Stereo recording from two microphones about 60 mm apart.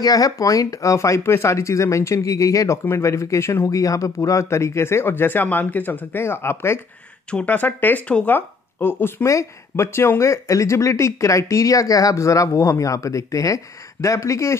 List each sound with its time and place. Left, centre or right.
0.0 s speech: left
1.2 s speech: left
2.8 s speech: left
3.6 s speech: left
6.2 s speech: left
7.4 s speech: left
9.2 s speech: left